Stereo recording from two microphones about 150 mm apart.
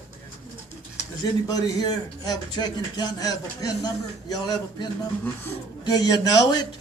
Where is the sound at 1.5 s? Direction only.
25° left (ahead or behind).